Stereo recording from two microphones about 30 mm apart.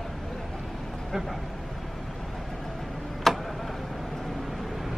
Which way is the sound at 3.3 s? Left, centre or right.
Centre.